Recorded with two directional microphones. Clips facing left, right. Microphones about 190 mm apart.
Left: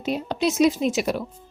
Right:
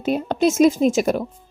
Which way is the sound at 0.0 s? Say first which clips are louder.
Right 5 dB; 50° right (ahead or behind).